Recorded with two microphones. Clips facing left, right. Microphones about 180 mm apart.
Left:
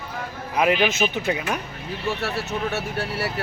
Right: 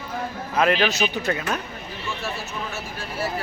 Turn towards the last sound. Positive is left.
turn(degrees=70)  # may be behind; listen again after turning